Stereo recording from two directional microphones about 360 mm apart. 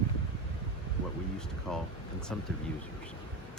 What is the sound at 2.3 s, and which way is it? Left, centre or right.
Speech, centre.